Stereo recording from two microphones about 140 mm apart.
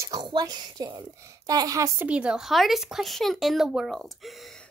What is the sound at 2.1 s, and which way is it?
Speech, 5° right (ahead or behind).